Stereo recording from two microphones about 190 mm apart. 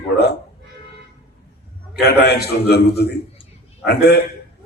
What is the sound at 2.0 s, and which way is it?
A man's voice, 60° left (ahead or behind).